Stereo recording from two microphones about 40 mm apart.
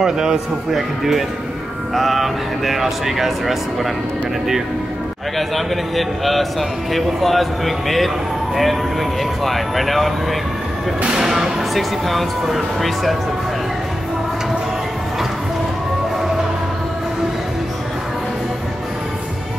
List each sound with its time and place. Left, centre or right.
0.0 s a man's voice: centre
0.7 s speech: centre
5.5 s speech: centre
9.4 s speech: centre
11.1 s a man's voice: centre
11.7 s speech: centre